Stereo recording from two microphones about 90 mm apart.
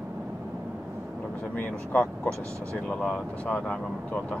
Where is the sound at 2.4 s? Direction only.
35° right (ahead or behind).